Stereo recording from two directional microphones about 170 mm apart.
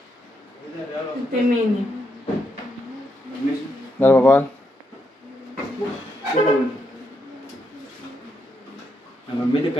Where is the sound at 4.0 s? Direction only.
10° left (ahead or behind).